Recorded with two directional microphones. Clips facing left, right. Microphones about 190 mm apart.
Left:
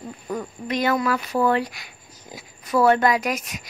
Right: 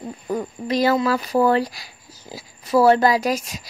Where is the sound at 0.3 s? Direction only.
30° right (ahead or behind).